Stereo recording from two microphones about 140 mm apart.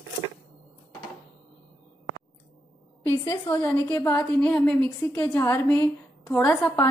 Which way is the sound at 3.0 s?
20° left (ahead or behind).